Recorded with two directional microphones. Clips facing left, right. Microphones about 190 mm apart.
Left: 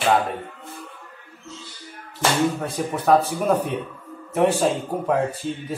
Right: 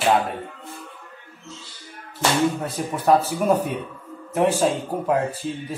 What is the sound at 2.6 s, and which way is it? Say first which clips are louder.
Speech: left 1 dB; centre (ahead or behind).